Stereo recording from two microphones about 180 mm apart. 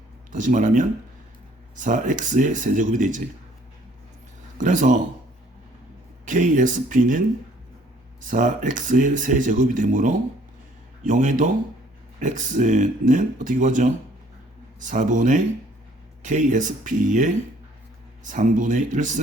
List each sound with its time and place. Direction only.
0.3 s speech: 45° right (ahead or behind)
4.5 s speech: 45° right (ahead or behind)
6.2 s speech: 45° right (ahead or behind)
8.2 s speech: 45° right (ahead or behind)